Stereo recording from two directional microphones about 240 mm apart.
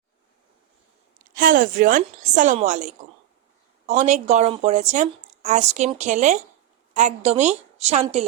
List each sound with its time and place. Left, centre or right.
1.2 s a woman's voice: right